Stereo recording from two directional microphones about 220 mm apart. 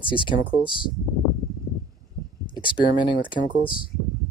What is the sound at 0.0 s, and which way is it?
Speech, 20° left (ahead or behind).